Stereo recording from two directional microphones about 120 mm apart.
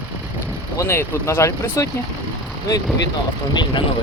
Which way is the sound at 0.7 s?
20° left (ahead or behind).